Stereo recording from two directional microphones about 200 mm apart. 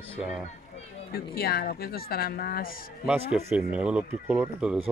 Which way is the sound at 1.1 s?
50° left (ahead or behind).